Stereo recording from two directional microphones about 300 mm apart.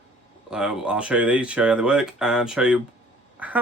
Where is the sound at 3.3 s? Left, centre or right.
Centre.